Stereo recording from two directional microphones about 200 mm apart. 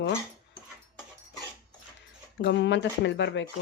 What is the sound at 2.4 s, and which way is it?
Speech, 60° left (ahead or behind).